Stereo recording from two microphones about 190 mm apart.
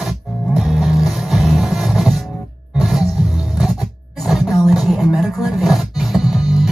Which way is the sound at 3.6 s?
Centre (ahead or behind).